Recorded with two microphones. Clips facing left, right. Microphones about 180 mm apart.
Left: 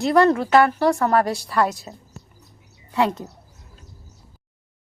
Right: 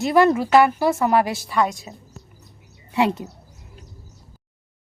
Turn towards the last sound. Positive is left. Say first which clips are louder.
# right 1 dB
turn(degrees=-20)  # may be behind; listen again after turning